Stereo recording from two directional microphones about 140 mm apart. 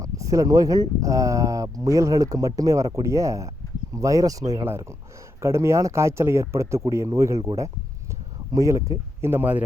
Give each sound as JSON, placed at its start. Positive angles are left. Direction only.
{"t": 0.0, "sound": "speech", "side_deg": -25}